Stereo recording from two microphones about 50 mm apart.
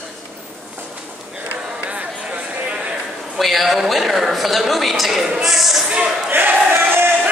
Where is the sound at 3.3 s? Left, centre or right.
Centre.